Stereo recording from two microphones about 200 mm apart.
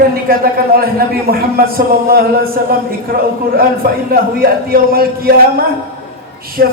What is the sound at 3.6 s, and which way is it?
Speech, 45° right (ahead or behind).